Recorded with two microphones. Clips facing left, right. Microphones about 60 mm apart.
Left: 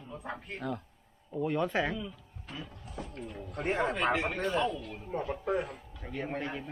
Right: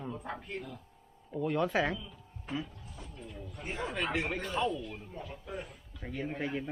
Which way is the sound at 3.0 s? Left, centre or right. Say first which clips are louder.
Left 6 dB; left.